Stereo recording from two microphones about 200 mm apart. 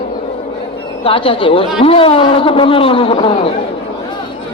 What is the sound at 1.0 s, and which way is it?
Speech, 25° left (ahead or behind).